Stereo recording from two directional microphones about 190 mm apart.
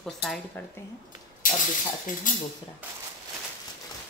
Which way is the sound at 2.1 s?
45° left (ahead or behind).